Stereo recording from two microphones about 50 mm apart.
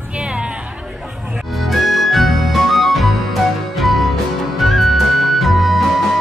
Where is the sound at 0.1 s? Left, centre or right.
Right.